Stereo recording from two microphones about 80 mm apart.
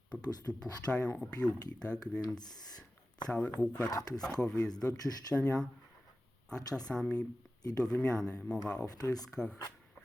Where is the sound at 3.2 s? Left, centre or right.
Centre.